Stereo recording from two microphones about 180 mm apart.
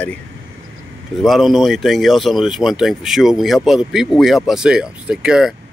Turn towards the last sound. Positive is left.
turn(degrees=-5)  # may be behind; listen again after turning